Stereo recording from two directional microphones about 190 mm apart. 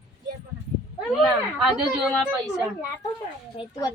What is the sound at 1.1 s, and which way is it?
A child's voice, centre (ahead or behind).